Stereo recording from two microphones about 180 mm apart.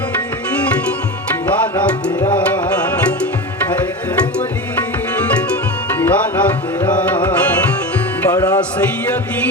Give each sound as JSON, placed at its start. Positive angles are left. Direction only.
{"t": 1.7, "sound": "tabla", "side_deg": 20}
{"t": 6.0, "sound": "tabla", "side_deg": 10}
{"t": 8.3, "sound": "music", "side_deg": 20}